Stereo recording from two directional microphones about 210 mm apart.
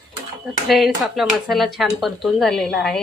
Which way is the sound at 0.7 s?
Centre (ahead or behind).